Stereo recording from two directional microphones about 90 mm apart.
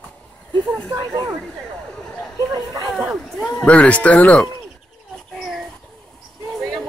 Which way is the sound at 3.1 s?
5° left (ahead or behind).